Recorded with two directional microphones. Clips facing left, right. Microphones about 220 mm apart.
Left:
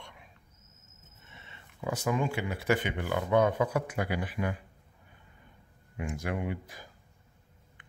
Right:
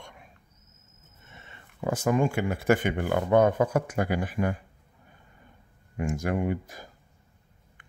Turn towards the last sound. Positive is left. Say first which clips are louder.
# right 6 dB
turn(degrees=-45)  # may be behind; listen again after turning